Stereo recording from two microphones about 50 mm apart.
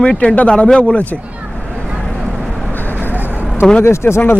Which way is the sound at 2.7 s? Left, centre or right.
Left.